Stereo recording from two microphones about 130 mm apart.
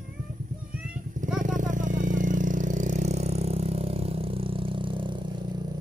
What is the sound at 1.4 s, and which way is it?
Vehicle, 80° right.